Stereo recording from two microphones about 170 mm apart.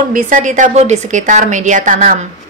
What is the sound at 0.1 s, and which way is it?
A woman's voice, 50° right (ahead or behind).